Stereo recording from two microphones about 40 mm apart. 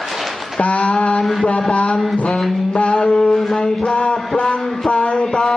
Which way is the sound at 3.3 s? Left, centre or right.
Centre.